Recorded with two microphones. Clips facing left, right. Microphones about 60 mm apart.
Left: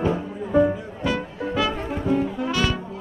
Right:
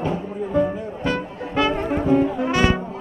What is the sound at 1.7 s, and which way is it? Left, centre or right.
Brass instrument, right.